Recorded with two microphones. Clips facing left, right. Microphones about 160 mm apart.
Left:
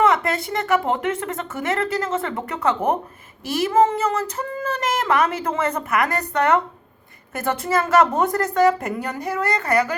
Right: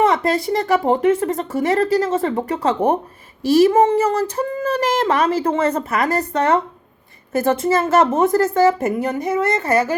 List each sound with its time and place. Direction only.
0.0 s speech: 30° right (ahead or behind)